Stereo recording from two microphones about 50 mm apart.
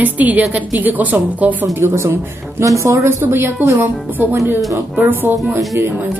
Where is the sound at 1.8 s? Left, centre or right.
Right.